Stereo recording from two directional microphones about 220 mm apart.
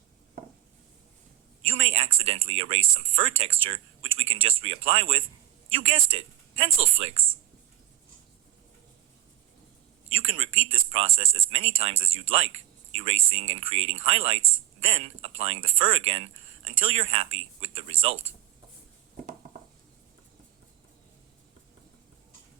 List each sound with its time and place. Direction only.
1.6 s a man's voice: 25° right (ahead or behind)
10.2 s speech: 25° right (ahead or behind)